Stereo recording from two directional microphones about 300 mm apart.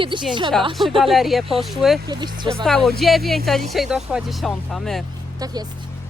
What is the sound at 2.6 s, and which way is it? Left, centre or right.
Speech, centre.